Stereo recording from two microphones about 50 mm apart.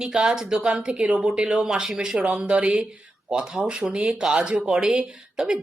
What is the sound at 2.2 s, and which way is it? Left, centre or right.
Speech, right.